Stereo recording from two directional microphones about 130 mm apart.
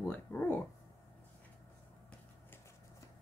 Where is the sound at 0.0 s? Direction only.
10° left (ahead or behind).